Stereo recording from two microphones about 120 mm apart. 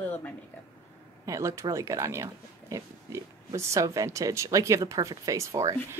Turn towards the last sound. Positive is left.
turn(degrees=-25)  # may be behind; listen again after turning